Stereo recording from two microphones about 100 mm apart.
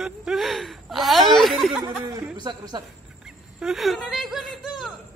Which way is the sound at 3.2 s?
5° right (ahead or behind).